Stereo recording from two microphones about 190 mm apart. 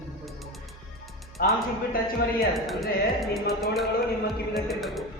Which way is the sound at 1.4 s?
50° left (ahead or behind).